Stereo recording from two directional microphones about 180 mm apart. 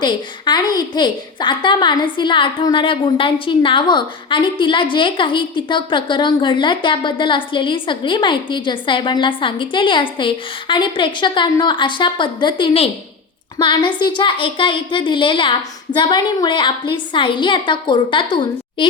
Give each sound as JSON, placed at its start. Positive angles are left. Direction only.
{"t": 0.0, "sound": "a woman's voice", "side_deg": 25}